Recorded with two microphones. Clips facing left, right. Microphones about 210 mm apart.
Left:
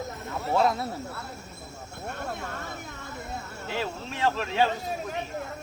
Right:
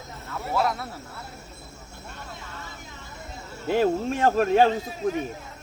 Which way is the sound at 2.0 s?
55° left (ahead or behind).